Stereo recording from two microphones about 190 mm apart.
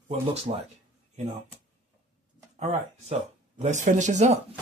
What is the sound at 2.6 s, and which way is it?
Speech, 35° right (ahead or behind).